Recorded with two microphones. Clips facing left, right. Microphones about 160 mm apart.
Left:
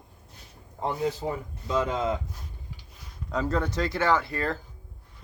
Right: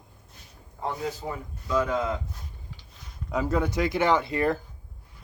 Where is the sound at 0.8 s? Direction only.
25° left (ahead or behind).